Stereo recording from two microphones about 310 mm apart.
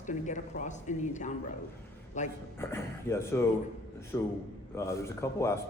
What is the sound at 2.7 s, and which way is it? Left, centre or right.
Speech, centre.